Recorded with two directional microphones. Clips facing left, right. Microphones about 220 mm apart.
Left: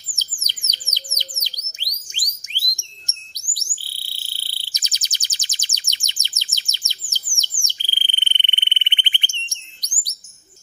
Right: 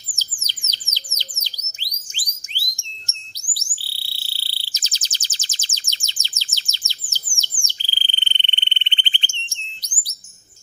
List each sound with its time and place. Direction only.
0.1 s bird: 15° left (ahead or behind)